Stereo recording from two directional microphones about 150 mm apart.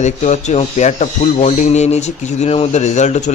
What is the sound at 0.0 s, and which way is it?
Speech, 50° left (ahead or behind).